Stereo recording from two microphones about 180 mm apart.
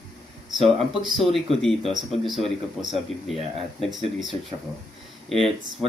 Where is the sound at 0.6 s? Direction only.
Centre (ahead or behind).